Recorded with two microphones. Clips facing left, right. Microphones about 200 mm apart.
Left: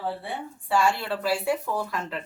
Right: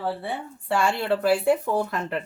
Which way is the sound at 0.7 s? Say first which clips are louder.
Right 2 dB; 55° right (ahead or behind).